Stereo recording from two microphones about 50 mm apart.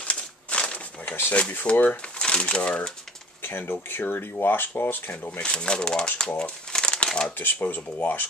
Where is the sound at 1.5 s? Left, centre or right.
Left.